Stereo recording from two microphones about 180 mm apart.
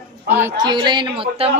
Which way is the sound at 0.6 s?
25° right (ahead or behind).